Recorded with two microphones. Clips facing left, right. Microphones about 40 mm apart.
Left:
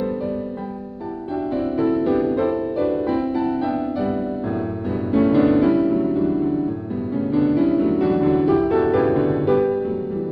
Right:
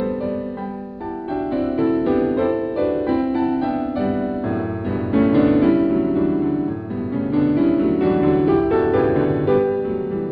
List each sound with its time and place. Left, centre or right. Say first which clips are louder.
1.6 s music: right 1 dB; centre